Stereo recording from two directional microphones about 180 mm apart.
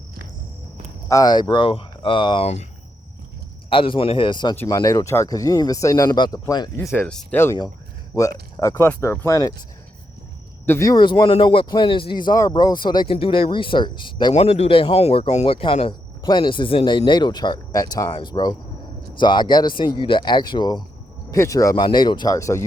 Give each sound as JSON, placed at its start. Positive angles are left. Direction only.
{"t": 1.0, "sound": "speech", "side_deg": 20}
{"t": 3.7, "sound": "speech", "side_deg": 30}
{"t": 6.7, "sound": "speech", "side_deg": 10}
{"t": 10.7, "sound": "speech", "side_deg": 15}
{"t": 14.3, "sound": "speech", "side_deg": 35}